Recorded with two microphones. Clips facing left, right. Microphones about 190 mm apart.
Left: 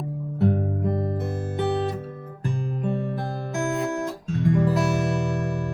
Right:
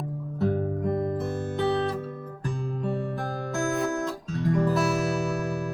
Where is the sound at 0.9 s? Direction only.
25° left (ahead or behind).